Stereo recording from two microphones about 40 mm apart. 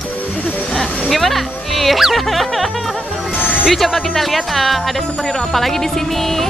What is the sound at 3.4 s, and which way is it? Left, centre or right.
Music, left.